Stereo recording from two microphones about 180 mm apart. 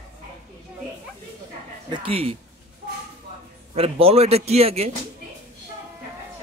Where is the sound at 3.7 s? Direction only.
35° right (ahead or behind).